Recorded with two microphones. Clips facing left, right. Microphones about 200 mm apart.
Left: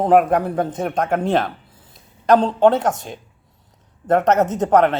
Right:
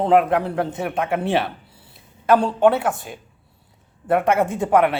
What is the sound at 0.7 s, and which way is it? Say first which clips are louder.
A man's voice: left 2 dB; 5° right (ahead or behind).